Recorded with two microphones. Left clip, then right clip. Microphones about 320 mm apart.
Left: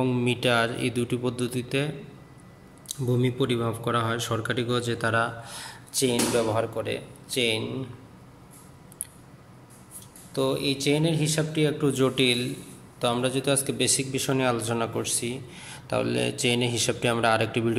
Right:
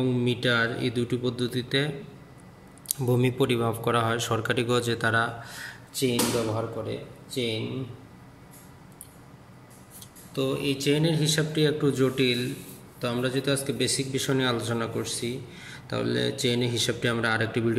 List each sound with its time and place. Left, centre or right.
0.0 s speech: centre
2.9 s speech: centre
7.2 s speech: left
10.3 s speech: centre